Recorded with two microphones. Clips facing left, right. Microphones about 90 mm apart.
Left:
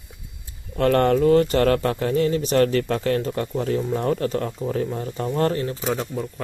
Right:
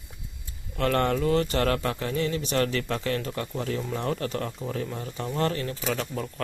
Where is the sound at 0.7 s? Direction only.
40° left (ahead or behind).